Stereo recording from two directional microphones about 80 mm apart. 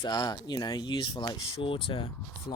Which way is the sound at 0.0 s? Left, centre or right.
Left.